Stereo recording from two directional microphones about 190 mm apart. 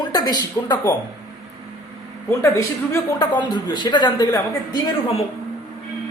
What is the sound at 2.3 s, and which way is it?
Speech, 15° left (ahead or behind).